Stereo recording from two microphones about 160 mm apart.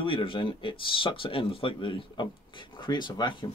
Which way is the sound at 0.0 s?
35° left (ahead or behind).